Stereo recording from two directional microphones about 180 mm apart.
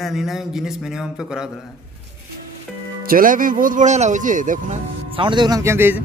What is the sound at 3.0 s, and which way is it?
Speech, 50° right (ahead or behind).